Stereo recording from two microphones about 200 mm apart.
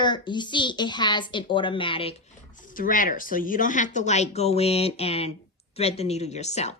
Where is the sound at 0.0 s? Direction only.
20° left (ahead or behind).